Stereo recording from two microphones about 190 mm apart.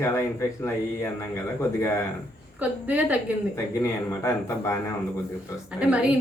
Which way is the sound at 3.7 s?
15° left (ahead or behind).